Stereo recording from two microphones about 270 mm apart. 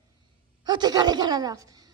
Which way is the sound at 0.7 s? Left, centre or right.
Centre.